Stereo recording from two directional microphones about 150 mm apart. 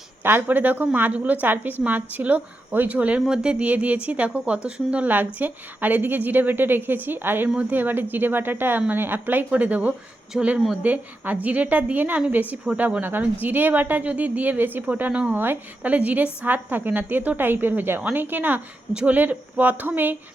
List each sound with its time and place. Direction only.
0.2 s speech: 15° right (ahead or behind)